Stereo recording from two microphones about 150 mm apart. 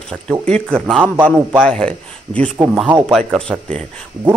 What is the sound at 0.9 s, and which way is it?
Speech, 10° right (ahead or behind).